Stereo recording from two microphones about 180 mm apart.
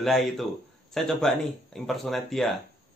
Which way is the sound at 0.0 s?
Centre (ahead or behind).